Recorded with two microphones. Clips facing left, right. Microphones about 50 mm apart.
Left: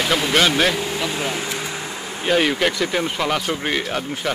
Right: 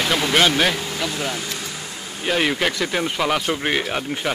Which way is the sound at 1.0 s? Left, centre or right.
Left.